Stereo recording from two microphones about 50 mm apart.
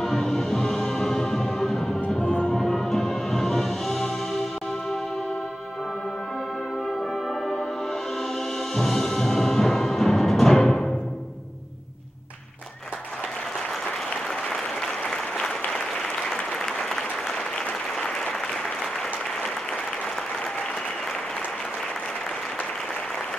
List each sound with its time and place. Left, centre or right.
0.0 s music: centre
2.0 s music: centre
2.6 s music: centre
8.7 s music: centre
14.5 s applause: centre